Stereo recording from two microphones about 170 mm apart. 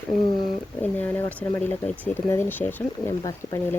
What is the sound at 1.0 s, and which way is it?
Speech, 10° left (ahead or behind).